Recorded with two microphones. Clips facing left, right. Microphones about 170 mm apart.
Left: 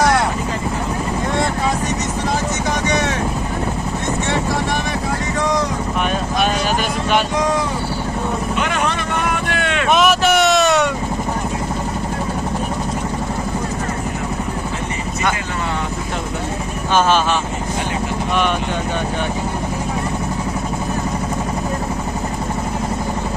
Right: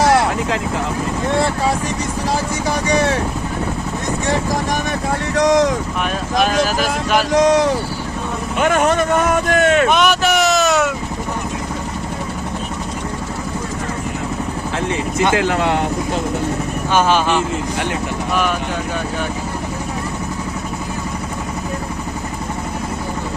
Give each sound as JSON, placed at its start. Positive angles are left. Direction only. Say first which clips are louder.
{"t": 2.9, "sound": "speech", "louder": "right 6 dB", "side_deg": -30}
{"t": 5.3, "sound": "vehicle", "louder": "right 7 dB", "side_deg": -90}
{"t": 6.4, "sound": "speech", "louder": "right 4 dB", "side_deg": 0}
{"t": 7.3, "sound": "speech", "louder": "right 6 dB", "side_deg": -90}
{"t": 8.6, "sound": "speech", "louder": "right 6 dB", "side_deg": -45}
{"t": 9.9, "sound": "vehicle", "louder": "left 1 dB", "side_deg": 0}
{"t": 15.4, "sound": "speech", "louder": "right 7 dB", "side_deg": -85}
{"t": 16.9, "sound": "speech", "louder": "even", "side_deg": -15}